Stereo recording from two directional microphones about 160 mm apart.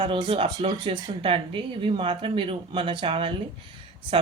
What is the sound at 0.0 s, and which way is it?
Speech, 35° right (ahead or behind).